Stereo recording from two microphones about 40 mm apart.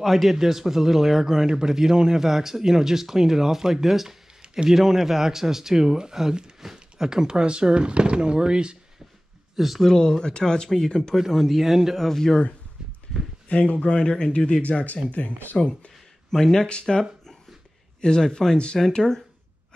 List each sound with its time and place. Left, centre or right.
0.0 s a man's voice: centre; by 8.7 s right
9.6 s speech: centre
9.8 s speech: centre
11.1 s speech: centre
12.1 s speech: centre
13.5 s speech: left
13.9 s speech: left
14.6 s speech: left
15.5 s speech: centre
16.3 s speech: centre
16.5 s speech: left
18.0 s speech: centre